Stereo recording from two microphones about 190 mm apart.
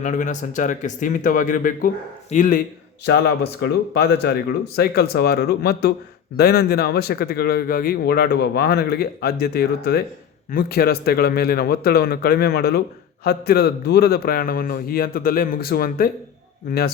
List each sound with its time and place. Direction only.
0.0 s a man's voice: 40° left (ahead or behind)
3.0 s a man's voice: 60° left (ahead or behind)